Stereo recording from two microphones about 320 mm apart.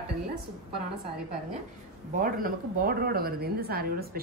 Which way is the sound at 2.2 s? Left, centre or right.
Right.